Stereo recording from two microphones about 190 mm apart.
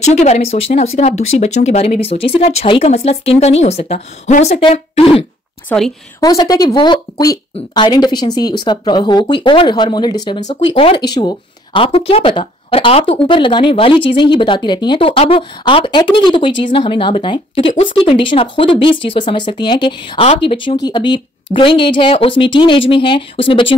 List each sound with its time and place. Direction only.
0.0 s speech: 35° left (ahead or behind)
5.7 s a woman's voice: centre (ahead or behind)
6.2 s speech: 20° left (ahead or behind)